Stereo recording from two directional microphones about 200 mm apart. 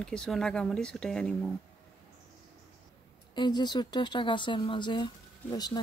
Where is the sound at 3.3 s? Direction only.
20° left (ahead or behind).